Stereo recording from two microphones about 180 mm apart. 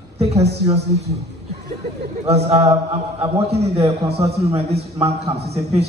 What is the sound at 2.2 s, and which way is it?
A man's voice, 35° right (ahead or behind).